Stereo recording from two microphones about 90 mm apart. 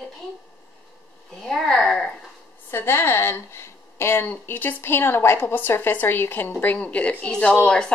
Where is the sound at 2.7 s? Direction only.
25° left (ahead or behind); by 7.9 s 10° left (ahead or behind).